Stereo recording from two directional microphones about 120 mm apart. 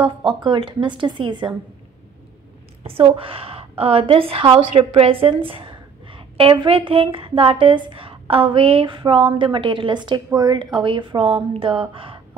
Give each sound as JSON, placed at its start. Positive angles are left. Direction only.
{"t": 0.0, "sound": "a woman's voice", "side_deg": -45}
{"t": 2.8, "sound": "a woman's voice", "side_deg": -55}